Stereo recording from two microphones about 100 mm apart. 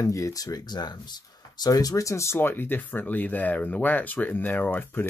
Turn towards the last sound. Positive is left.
turn(degrees=15)  # may be behind; listen again after turning